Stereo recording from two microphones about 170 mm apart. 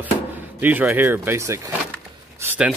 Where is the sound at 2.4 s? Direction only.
5° right (ahead or behind).